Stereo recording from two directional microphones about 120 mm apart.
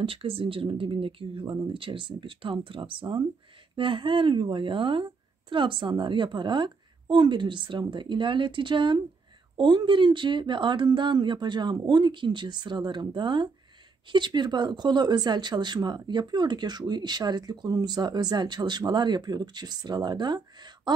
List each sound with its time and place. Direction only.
0.0 s speech: 50° right (ahead or behind)